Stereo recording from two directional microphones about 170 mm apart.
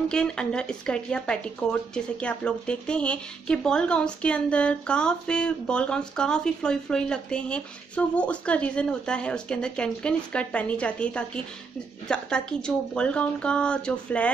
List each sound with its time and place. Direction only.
0.1 s speech: 5° left (ahead or behind)